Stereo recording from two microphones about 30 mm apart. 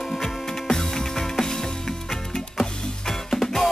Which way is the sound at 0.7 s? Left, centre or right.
Centre.